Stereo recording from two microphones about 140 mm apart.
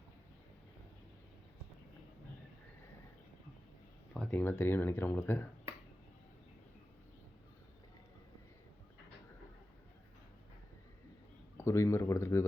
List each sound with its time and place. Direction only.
4.1 s speech: 10° left (ahead or behind)
11.5 s speech: 20° left (ahead or behind)